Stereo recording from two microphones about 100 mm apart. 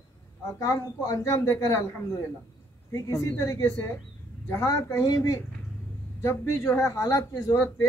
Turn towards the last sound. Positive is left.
turn(degrees=20)  # may be behind; listen again after turning